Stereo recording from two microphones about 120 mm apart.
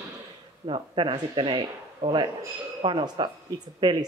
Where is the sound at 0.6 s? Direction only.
45° right (ahead or behind).